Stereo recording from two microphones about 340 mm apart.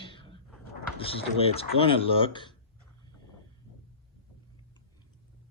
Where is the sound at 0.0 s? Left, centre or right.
Centre.